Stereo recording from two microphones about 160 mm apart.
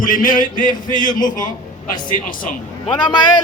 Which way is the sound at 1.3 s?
55° left (ahead or behind).